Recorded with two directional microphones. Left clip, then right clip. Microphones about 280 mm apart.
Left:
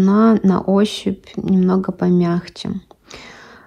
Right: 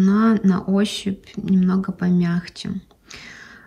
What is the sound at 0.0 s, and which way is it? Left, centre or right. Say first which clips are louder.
Speech: left 4 dB; centre.